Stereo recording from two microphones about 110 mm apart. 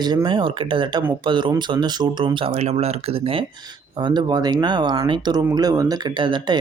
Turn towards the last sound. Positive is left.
turn(degrees=-45)  # may be behind; listen again after turning